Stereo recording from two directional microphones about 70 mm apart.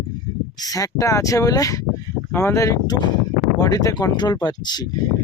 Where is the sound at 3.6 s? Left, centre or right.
Left.